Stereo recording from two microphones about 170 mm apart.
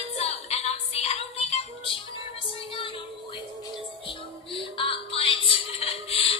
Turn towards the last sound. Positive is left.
turn(degrees=35)  # may be behind; listen again after turning